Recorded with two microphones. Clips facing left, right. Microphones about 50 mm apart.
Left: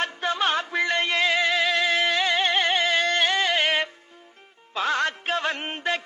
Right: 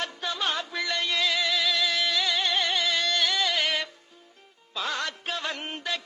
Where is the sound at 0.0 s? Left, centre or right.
Left.